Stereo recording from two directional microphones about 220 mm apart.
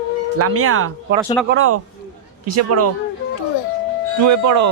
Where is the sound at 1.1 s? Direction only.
50° right (ahead or behind).